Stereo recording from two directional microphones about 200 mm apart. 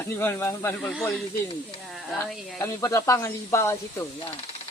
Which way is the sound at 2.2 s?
Centre (ahead or behind).